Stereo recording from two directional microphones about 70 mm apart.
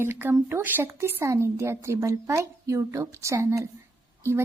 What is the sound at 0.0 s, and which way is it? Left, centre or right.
A woman's voice, right.